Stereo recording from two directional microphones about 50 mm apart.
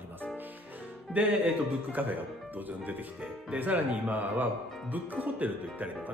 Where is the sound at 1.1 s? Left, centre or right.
Right.